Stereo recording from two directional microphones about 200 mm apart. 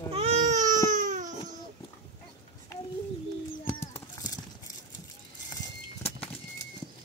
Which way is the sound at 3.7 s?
10° left (ahead or behind).